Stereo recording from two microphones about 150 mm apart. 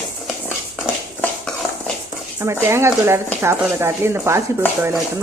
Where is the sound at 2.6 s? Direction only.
15° right (ahead or behind).